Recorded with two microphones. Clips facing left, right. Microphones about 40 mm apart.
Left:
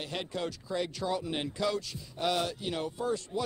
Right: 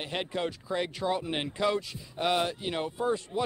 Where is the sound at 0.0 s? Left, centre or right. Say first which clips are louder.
Right 3 dB; right.